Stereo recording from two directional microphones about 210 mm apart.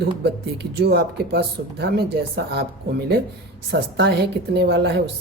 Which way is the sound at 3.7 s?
50° right (ahead or behind).